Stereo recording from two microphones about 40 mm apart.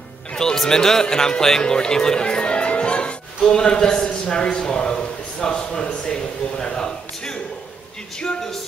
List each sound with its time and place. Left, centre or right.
0.3 s music: centre
0.6 s a man's voice: centre